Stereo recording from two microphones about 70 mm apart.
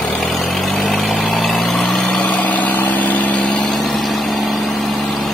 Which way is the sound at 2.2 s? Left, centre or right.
Left.